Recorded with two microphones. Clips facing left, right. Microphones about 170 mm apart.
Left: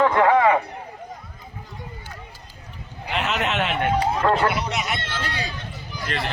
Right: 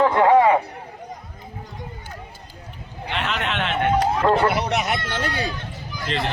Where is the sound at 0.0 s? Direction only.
5° right (ahead or behind).